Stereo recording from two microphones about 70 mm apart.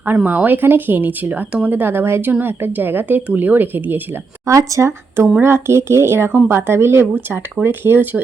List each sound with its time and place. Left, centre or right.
0.3 s a woman's voice: right
4.4 s a woman's voice: right